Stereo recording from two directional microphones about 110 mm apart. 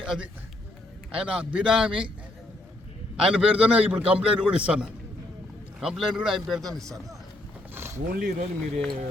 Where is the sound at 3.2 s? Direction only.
5° right (ahead or behind).